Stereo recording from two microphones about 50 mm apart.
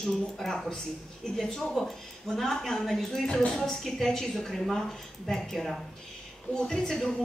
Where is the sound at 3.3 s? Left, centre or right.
Centre.